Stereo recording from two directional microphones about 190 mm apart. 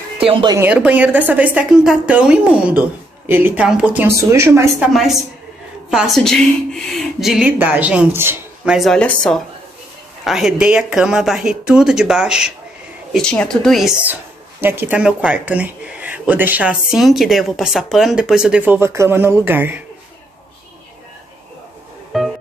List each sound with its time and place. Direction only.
0.3 s speech: 25° right (ahead or behind)
0.6 s speech: 5° right (ahead or behind)
5.9 s a woman's voice: centre (ahead or behind)
22.1 s music: centre (ahead or behind)